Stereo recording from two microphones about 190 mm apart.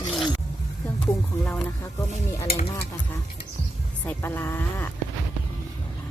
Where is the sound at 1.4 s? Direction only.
Centre (ahead or behind).